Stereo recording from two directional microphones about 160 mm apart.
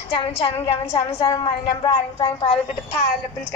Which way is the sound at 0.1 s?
35° left (ahead or behind).